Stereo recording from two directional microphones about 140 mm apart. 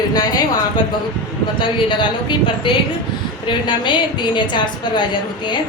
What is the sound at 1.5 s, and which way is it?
A woman's voice, 35° left (ahead or behind).